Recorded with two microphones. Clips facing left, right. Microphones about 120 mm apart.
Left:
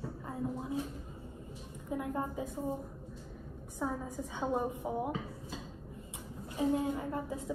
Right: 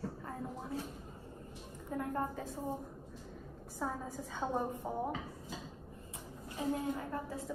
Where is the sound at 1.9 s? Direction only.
10° left (ahead or behind).